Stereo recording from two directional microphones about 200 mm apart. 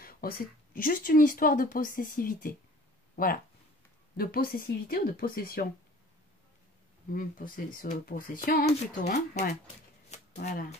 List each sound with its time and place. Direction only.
0.0 s speech: 45° left (ahead or behind)
4.2 s speech: 50° left (ahead or behind)
7.2 s speech: 45° left (ahead or behind)
10.1 s shuffling cards: 35° left (ahead or behind)